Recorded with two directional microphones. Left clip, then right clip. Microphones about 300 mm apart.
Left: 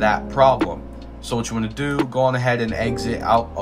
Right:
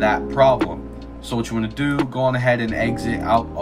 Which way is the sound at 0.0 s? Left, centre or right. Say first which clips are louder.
Even; centre.